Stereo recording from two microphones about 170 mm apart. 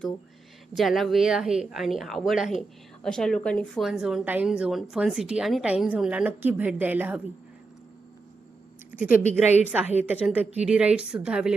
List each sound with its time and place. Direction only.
0.8 s a woman's voice: centre (ahead or behind)
8.9 s speech: 10° right (ahead or behind)
9.5 s a woman's voice: 40° left (ahead or behind)
10.0 s a woman's voice: 10° right (ahead or behind)